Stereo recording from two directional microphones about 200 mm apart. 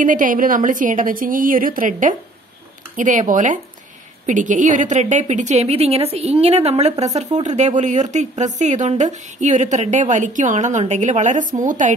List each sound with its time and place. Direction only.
0.0 s a woman's voice: 40° right (ahead or behind)